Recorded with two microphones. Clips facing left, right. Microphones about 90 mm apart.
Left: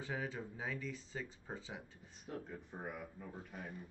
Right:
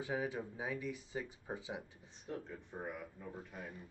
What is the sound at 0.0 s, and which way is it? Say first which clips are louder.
Speech: right 4 dB; 15° right (ahead or behind).